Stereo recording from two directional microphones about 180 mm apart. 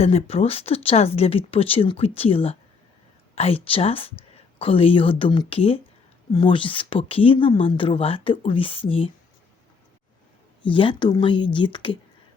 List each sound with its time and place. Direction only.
0.0 s speech: 35° left (ahead or behind)
10.6 s speech: 30° left (ahead or behind)